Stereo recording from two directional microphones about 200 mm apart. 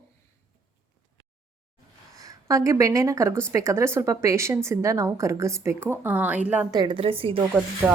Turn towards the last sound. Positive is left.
turn(degrees=-10)  # may be behind; listen again after turning